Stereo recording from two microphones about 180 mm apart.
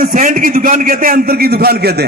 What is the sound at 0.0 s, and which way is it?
A man's voice, 50° right (ahead or behind).